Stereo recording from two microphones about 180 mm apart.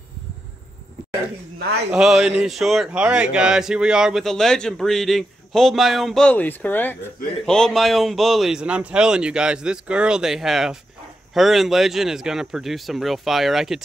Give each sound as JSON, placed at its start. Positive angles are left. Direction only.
{"t": 1.6, "sound": "speech", "side_deg": -65}
{"t": 1.9, "sound": "speech", "side_deg": -5}